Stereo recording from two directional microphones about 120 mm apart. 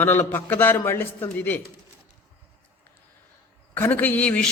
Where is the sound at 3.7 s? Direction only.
15° left (ahead or behind).